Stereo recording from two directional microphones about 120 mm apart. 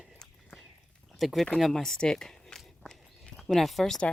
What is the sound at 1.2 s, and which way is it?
Speech, centre (ahead or behind).